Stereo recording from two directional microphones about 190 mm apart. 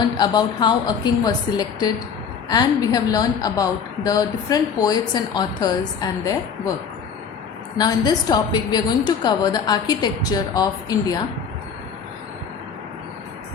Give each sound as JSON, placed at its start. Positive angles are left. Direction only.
{"t": 0.2, "sound": "a woman's voice", "side_deg": 20}
{"t": 7.8, "sound": "a woman's voice", "side_deg": 20}